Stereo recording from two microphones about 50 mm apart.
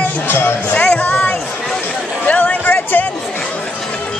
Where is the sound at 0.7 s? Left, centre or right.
Left.